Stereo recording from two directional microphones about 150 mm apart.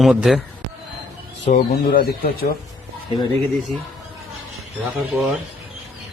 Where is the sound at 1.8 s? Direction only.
75° left (ahead or behind).